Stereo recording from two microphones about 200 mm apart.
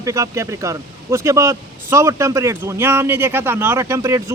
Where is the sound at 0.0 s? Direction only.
15° right (ahead or behind).